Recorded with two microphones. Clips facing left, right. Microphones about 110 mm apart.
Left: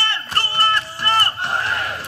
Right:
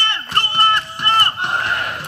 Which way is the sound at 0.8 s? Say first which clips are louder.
Right 2 dB; 55° right (ahead or behind).